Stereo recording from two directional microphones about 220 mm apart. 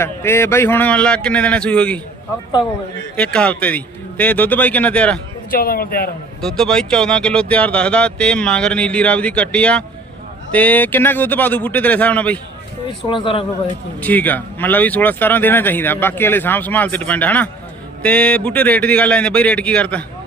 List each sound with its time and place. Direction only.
0.0 s speech: 10° left (ahead or behind)
3.2 s speech: 5° left (ahead or behind)
5.5 s a man's voice: 40° left (ahead or behind)
6.4 s speech: centre (ahead or behind)
13.1 s speech: 20° left (ahead or behind)
14.0 s speech: 10° left (ahead or behind)